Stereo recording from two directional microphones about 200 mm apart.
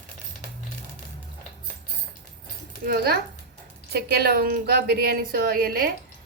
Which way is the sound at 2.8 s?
50° right (ahead or behind).